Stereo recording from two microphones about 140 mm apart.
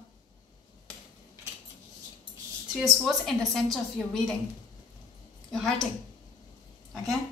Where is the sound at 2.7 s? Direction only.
Centre (ahead or behind).